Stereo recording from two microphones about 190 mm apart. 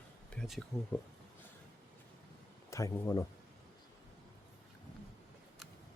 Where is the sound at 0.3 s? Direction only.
Centre (ahead or behind).